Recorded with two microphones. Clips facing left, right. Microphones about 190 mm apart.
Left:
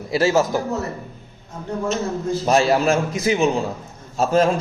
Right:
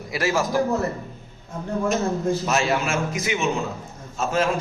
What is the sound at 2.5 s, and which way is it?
A man's voice, 35° left (ahead or behind).